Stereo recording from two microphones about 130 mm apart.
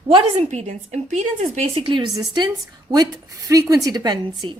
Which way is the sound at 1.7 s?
40° right (ahead or behind).